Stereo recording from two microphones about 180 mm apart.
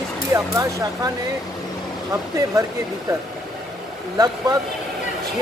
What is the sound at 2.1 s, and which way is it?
Speech, 20° right (ahead or behind).